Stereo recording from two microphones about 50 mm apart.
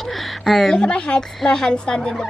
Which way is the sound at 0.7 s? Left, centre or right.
Centre.